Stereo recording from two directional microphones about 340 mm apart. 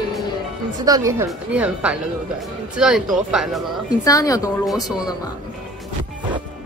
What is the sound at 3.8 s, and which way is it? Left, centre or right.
Speech, centre.